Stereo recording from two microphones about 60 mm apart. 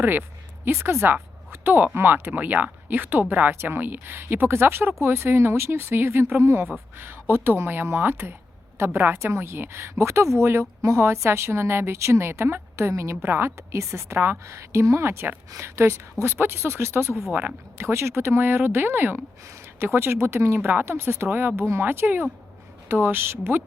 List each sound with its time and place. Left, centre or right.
0.0 s speech: right
1.6 s speech: right